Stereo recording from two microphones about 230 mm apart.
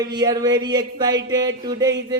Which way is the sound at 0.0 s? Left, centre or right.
Centre.